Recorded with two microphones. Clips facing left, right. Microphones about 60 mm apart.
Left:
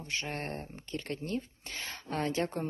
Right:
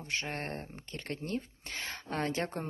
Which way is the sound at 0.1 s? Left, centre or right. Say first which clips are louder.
Even; right.